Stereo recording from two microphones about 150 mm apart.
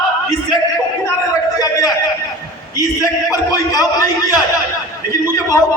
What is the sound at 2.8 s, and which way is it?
A man's voice, 25° left (ahead or behind).